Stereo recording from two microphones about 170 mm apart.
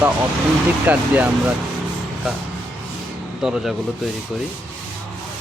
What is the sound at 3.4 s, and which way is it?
Speech, 5° right (ahead or behind).